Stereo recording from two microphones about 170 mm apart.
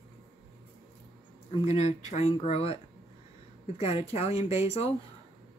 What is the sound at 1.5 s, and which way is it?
Speech, 40° left (ahead or behind).